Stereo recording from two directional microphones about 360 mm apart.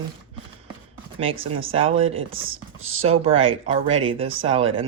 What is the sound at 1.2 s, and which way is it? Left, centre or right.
Speech, centre.